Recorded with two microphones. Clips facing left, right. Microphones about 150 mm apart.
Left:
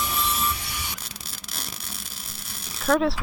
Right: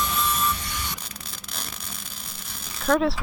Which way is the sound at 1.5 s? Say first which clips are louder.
Even; 5° left (ahead or behind).